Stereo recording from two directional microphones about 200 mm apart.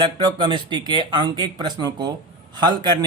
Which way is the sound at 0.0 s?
25° right (ahead or behind).